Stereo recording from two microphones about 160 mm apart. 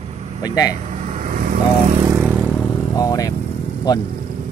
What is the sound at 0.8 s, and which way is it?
Vehicle, 45° right (ahead or behind).